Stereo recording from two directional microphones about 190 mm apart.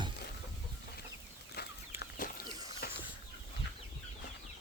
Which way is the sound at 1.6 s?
55° left (ahead or behind).